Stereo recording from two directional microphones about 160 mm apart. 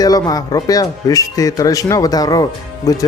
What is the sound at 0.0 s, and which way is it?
Speech, 25° left (ahead or behind).